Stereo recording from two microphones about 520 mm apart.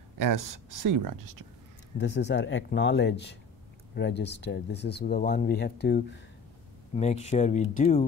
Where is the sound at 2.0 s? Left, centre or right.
Centre.